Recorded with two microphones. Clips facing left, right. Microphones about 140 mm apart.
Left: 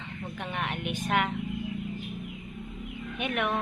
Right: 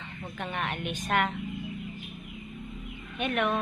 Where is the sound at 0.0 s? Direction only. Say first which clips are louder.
Even; 15° left (ahead or behind).